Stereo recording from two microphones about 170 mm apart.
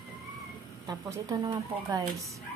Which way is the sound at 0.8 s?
20° right (ahead or behind).